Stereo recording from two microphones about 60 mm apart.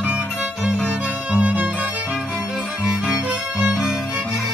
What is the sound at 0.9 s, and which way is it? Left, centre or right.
Music, right.